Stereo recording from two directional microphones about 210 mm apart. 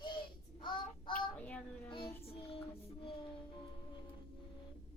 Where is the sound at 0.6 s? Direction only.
20° left (ahead or behind).